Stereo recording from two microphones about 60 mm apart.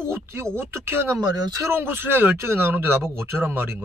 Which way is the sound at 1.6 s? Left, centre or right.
Right.